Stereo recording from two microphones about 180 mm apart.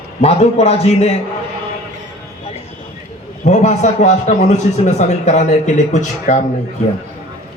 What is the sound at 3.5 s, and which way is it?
A man's voice, 40° left (ahead or behind).